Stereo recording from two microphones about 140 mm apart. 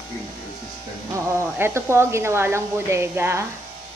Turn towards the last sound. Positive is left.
turn(degrees=-20)  # may be behind; listen again after turning